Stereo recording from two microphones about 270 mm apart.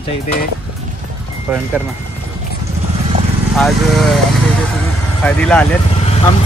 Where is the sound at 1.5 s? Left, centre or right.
Centre.